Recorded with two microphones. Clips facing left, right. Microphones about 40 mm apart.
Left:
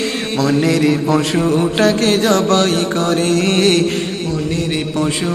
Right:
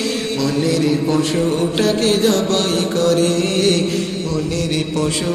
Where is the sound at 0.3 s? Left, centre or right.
Left.